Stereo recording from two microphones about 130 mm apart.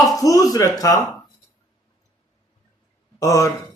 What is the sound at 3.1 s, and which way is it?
Speech, 25° left (ahead or behind).